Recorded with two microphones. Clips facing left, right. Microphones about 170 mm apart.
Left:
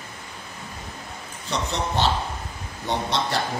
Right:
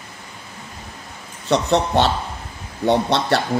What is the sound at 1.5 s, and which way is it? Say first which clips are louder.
Speech: right 9 dB; 65° right (ahead or behind).